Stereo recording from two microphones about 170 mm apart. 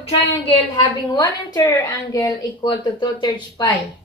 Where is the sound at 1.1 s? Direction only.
20° left (ahead or behind).